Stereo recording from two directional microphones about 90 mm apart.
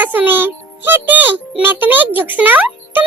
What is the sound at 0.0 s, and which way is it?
Speech, 20° right (ahead or behind).